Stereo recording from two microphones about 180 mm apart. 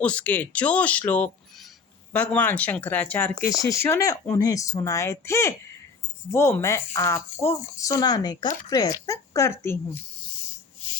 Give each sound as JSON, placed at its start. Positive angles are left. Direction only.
{"t": 0.0, "sound": "speech", "side_deg": 5}